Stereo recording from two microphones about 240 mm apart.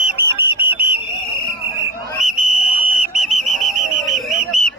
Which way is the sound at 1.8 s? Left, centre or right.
Centre.